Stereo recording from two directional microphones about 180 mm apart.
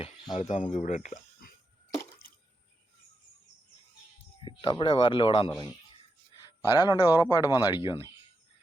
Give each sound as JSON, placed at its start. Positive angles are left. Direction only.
{"t": 0.3, "sound": "speech", "side_deg": 35}
{"t": 4.4, "sound": "speech", "side_deg": 25}
{"t": 6.7, "sound": "speech", "side_deg": 20}